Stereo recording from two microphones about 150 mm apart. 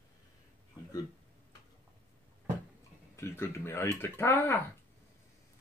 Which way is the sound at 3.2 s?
15° left (ahead or behind).